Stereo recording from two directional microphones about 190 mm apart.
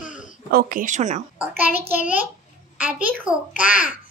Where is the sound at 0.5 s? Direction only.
50° right (ahead or behind).